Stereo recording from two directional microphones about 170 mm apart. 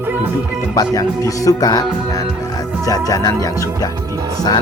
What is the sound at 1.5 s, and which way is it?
Music, 20° left (ahead or behind).